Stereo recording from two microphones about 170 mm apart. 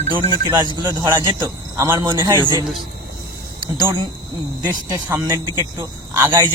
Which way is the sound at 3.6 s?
25° right (ahead or behind).